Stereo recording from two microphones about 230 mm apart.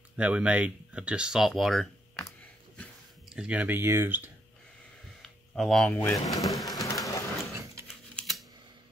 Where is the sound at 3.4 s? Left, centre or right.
Centre.